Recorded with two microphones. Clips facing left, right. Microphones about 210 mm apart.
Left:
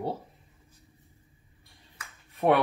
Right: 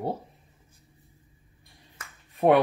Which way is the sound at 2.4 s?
30° right (ahead or behind).